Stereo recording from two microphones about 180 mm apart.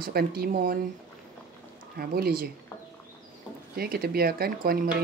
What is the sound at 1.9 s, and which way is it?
Speech, 55° right (ahead or behind).